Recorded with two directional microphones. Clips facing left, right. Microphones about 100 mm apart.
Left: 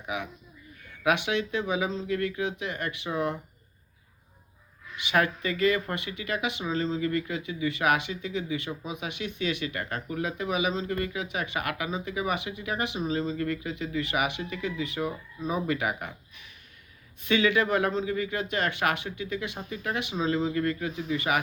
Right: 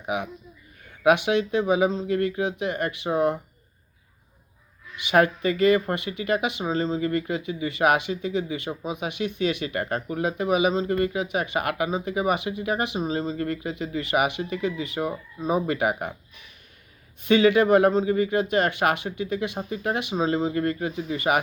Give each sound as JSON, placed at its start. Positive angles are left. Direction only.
{"t": 1.3, "sound": "speech", "side_deg": -40}
{"t": 5.1, "sound": "speech", "side_deg": -35}
{"t": 8.7, "sound": "speech", "side_deg": -20}
{"t": 9.1, "sound": "speech", "side_deg": -40}
{"t": 10.5, "sound": "speech", "side_deg": -45}
{"t": 13.0, "sound": "speech", "side_deg": -35}
{"t": 17.2, "sound": "speech", "side_deg": -35}